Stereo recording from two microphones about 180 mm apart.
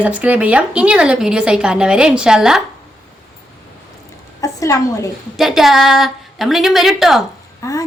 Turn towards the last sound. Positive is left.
turn(degrees=20)  # may be behind; listen again after turning